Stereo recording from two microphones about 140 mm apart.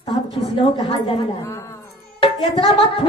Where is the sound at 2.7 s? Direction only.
40° left (ahead or behind).